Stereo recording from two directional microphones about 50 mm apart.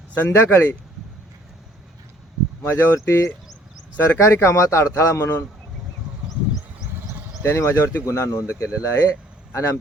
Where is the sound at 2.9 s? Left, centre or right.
Left.